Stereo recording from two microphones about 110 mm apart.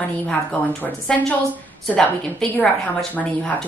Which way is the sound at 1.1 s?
5° left (ahead or behind).